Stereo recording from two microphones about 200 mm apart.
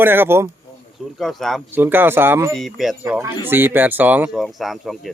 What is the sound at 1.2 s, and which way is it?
Speech, centre (ahead or behind).